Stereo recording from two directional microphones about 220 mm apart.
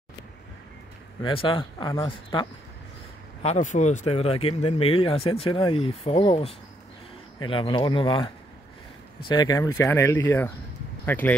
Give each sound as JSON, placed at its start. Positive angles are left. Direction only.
{"t": 1.2, "sound": "speech", "side_deg": 25}
{"t": 3.4, "sound": "speech", "side_deg": 35}
{"t": 9.3, "sound": "speech", "side_deg": 15}